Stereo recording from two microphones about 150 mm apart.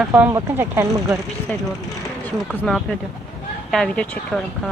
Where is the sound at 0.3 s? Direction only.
20° right (ahead or behind).